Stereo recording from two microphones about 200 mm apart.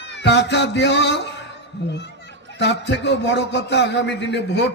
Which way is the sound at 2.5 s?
60° left (ahead or behind).